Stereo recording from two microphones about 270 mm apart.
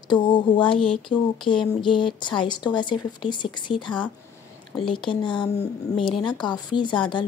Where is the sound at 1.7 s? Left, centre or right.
Centre.